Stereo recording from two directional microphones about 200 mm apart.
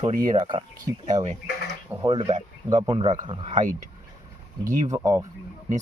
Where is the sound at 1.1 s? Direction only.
35° right (ahead or behind).